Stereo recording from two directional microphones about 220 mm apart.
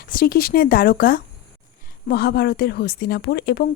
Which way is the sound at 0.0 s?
40° left (ahead or behind).